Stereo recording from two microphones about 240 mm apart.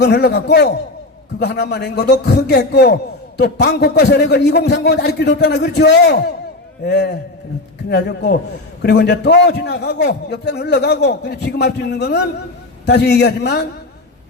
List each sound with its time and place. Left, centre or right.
0.0 s a man's voice: left